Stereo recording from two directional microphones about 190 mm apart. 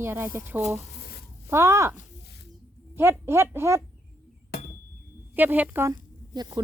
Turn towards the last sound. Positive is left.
turn(degrees=-20)  # may be behind; listen again after turning